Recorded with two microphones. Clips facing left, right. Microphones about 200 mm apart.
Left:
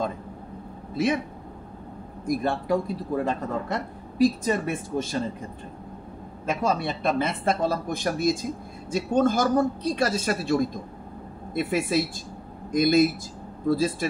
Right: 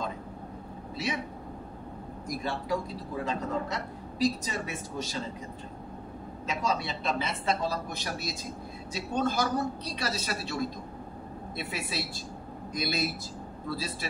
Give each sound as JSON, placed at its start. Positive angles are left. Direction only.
{"t": 0.9, "sound": "a man's voice", "side_deg": 50}
{"t": 2.2, "sound": "a man's voice", "side_deg": 55}
{"t": 6.4, "sound": "a man's voice", "side_deg": 55}